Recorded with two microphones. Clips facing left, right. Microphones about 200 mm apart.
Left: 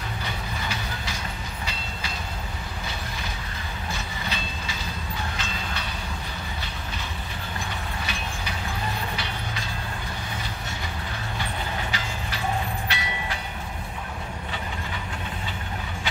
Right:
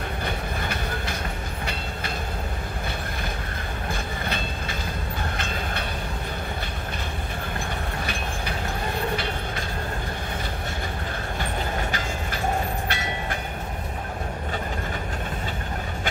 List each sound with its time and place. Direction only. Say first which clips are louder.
0.2 s train: right 3 dB; 55° right (ahead or behind)
3.9 s train: right 3 dB; 55° right (ahead or behind)
9.1 s train: right 4 dB; 55° right (ahead or behind)
12.8 s train: right 2 dB; 50° right (ahead or behind)